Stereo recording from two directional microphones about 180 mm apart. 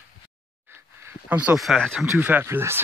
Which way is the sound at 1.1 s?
10° right (ahead or behind).